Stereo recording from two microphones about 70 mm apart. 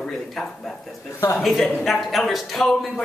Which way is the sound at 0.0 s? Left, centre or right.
Centre.